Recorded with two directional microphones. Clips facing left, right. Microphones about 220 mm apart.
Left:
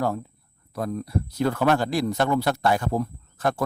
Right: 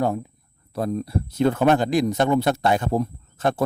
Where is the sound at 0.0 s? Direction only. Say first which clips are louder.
Right 3 dB; 15° right (ahead or behind).